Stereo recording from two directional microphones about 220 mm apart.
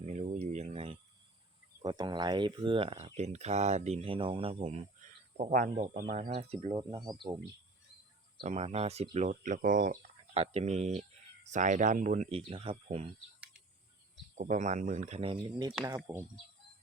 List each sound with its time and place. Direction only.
0.0 s a sound: 30° right (ahead or behind)
1.8 s speech: 20° right (ahead or behind)
6.7 s speech: 20° right (ahead or behind)
8.4 s speech: 30° right (ahead or behind)
14.3 s speech: 35° right (ahead or behind); by 16.2 s 15° right (ahead or behind)